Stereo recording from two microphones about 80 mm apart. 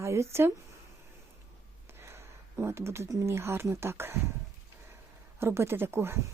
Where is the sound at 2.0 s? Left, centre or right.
Right.